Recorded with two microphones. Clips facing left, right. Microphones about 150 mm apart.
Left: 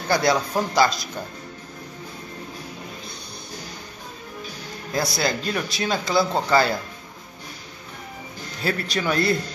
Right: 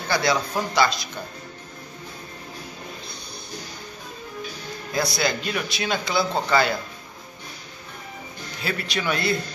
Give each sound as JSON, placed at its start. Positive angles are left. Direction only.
{"t": 0.1, "sound": "a man's voice", "side_deg": 45}
{"t": 4.9, "sound": "speech", "side_deg": 35}
{"t": 8.6, "sound": "speech", "side_deg": 40}